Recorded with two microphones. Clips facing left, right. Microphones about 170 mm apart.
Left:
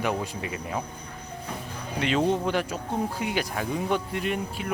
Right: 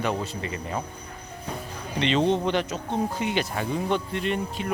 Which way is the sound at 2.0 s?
5° left (ahead or behind).